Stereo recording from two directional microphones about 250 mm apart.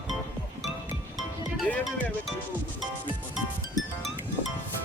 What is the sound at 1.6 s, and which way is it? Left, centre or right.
Speech, centre.